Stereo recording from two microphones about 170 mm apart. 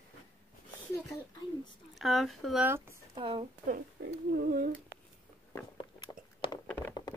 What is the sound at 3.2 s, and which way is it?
Speech, 30° right (ahead or behind).